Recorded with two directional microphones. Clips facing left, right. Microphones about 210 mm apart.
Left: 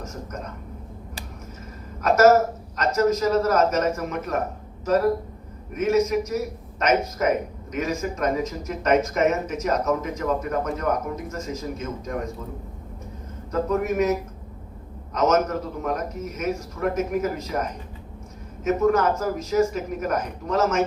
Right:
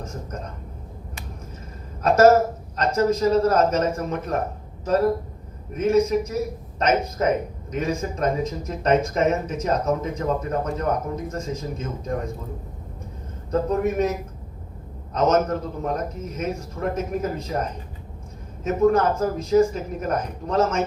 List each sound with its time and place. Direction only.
2.0 s a woman's voice: 30° right (ahead or behind)
5.7 s speech: 30° right (ahead or behind)
13.5 s speech: 30° right (ahead or behind)
15.1 s speech: 30° right (ahead or behind)